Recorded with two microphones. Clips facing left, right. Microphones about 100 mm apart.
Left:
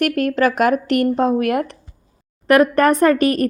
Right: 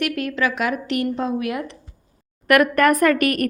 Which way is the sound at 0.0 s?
45° left (ahead or behind).